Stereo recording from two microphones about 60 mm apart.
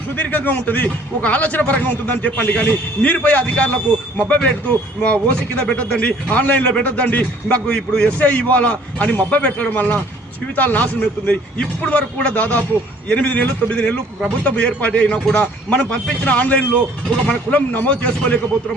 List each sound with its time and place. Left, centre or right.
0.2 s a man's voice: left